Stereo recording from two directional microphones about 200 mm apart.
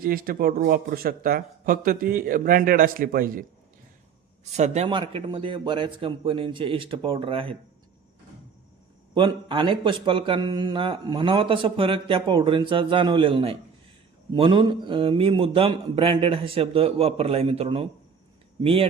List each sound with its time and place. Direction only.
0.0 s speech: 45° right (ahead or behind)
4.5 s a man's voice: 35° right (ahead or behind)
9.1 s a man's voice: 25° right (ahead or behind)